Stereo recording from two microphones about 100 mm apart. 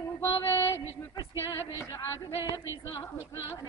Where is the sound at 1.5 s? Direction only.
40° left (ahead or behind).